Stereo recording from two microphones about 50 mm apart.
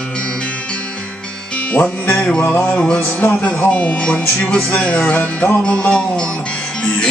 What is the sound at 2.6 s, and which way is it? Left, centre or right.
Music, left.